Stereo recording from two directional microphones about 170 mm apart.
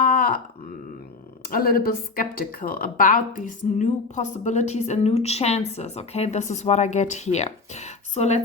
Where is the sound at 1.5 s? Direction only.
60° left (ahead or behind); by 8.4 s 40° left (ahead or behind).